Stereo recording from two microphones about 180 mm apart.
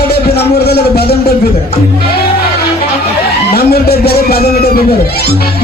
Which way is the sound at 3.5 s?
60° left (ahead or behind).